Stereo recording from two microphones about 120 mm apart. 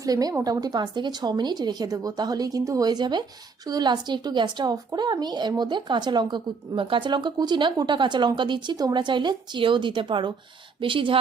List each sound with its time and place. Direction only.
0.0 s a woman's voice: 30° right (ahead or behind)